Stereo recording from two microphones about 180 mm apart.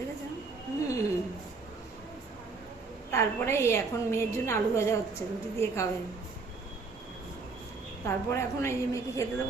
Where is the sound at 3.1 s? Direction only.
15° left (ahead or behind).